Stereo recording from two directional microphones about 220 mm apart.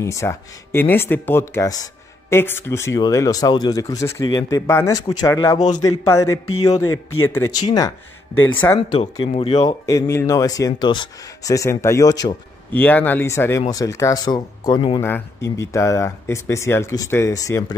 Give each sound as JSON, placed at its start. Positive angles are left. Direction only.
{"t": 0.0, "sound": "speech", "side_deg": 15}
{"t": 6.8, "sound": "speech", "side_deg": 70}
{"t": 8.4, "sound": "speech", "side_deg": 10}
{"t": 8.9, "sound": "speech", "side_deg": 20}
{"t": 9.8, "sound": "speech", "side_deg": 15}
{"t": 15.0, "sound": "speech", "side_deg": 10}